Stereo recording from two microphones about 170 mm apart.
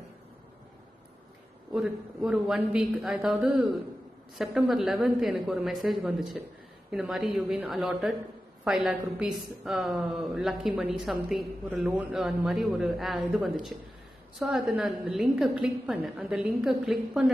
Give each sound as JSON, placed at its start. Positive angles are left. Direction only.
{"t": 1.7, "sound": "a woman's voice", "side_deg": -5}